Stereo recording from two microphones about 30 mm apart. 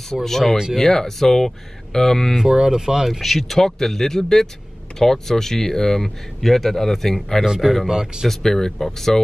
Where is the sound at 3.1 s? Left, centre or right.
Centre.